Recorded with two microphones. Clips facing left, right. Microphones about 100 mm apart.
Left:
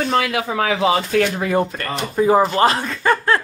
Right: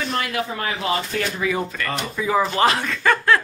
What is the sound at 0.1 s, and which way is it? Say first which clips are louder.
Speech: left 5 dB; 90° left.